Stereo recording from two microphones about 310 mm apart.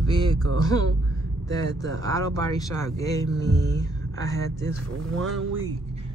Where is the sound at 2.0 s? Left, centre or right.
Centre.